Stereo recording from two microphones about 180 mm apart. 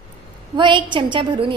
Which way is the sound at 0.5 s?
25° right (ahead or behind).